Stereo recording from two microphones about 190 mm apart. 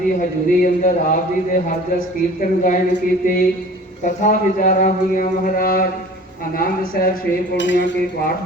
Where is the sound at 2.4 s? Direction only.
45° left (ahead or behind).